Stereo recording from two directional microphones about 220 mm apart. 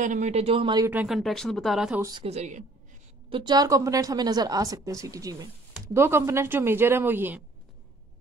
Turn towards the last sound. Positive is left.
turn(degrees=-10)  # may be behind; listen again after turning